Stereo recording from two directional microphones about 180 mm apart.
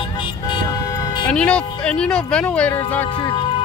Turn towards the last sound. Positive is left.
turn(degrees=30)  # may be behind; listen again after turning